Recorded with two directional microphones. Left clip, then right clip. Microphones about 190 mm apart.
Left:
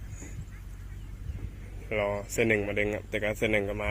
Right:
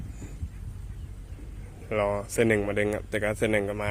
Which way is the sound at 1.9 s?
20° right (ahead or behind).